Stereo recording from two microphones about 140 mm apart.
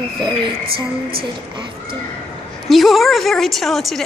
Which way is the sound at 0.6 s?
90° right.